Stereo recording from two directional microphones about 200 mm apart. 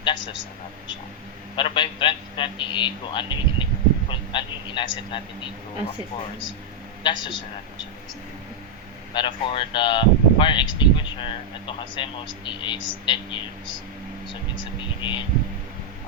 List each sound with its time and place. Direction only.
0.0 s speech: 25° left (ahead or behind)
1.5 s speech: 25° left (ahead or behind)
7.0 s speech: 25° left (ahead or behind)
9.1 s speech: 25° left (ahead or behind)
15.0 s speech: 25° left (ahead or behind)